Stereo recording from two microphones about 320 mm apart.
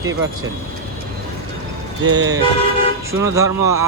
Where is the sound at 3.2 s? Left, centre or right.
Centre.